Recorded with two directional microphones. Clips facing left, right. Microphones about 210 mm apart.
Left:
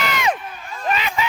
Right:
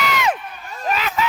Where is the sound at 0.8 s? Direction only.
5° right (ahead or behind).